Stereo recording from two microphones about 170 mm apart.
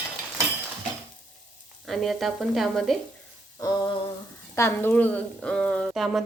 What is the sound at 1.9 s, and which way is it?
A woman's voice, centre (ahead or behind).